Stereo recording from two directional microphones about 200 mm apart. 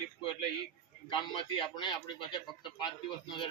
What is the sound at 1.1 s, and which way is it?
Speech, 25° left (ahead or behind).